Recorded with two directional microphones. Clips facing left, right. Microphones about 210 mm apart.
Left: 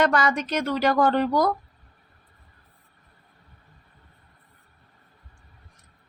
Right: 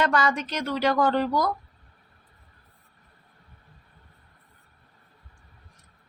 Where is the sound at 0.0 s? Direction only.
50° left (ahead or behind).